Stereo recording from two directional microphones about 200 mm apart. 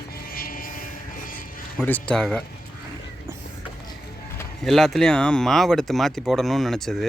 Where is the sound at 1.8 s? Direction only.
10° left (ahead or behind).